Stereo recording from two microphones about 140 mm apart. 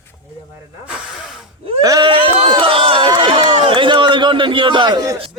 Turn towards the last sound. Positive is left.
turn(degrees=-30)  # may be behind; listen again after turning